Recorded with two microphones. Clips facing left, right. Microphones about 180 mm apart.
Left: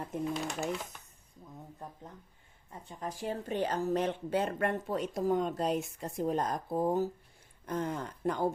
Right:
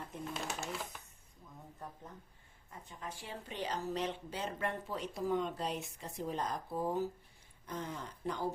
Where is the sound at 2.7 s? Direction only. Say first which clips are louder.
Left 6 dB; 30° left (ahead or behind); by 8.5 s 50° left (ahead or behind).